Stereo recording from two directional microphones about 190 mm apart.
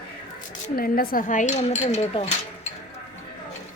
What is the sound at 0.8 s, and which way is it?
Speech, 50° left (ahead or behind).